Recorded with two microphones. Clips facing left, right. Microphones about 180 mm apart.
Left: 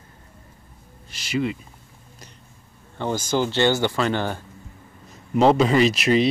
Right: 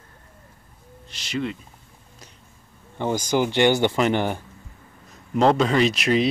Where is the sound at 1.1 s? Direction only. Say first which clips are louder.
Left 3 dB; 5° left (ahead or behind).